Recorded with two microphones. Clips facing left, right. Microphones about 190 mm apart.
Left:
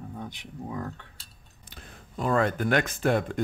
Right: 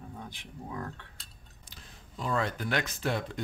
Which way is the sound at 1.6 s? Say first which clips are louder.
Left 6 dB; 55° left (ahead or behind).